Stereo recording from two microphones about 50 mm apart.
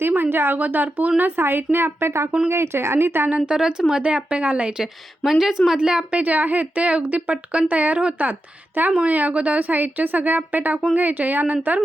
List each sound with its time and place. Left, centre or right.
0.0 s a sound: right
0.6 s a woman's voice: right
3.2 s a woman's voice: right
3.5 s a woman's voice: centre
4.8 s speech: centre
6.1 s a woman's voice: right